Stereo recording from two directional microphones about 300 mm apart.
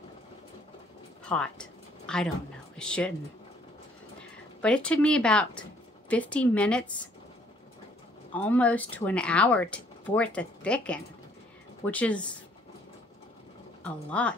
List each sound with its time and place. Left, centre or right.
1.3 s a sound: centre
2.8 s speech: centre
4.6 s speech: centre
8.4 s speech: centre
13.8 s speech: centre